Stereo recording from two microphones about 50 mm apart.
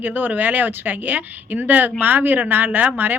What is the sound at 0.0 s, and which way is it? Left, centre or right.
Speech, right.